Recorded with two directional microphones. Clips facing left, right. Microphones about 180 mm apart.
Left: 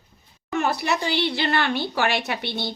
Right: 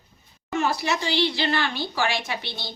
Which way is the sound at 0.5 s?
60° left (ahead or behind).